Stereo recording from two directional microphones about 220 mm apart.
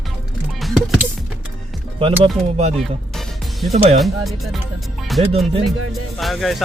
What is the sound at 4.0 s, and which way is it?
Speech, centre (ahead or behind).